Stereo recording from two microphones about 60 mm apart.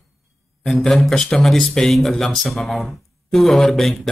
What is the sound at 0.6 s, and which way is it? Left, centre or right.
Music, centre.